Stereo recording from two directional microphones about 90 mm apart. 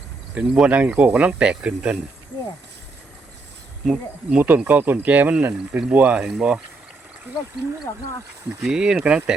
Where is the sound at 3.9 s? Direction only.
20° right (ahead or behind).